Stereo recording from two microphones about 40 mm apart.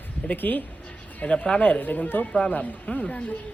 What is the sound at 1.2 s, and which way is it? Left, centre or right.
A woman's voice, left.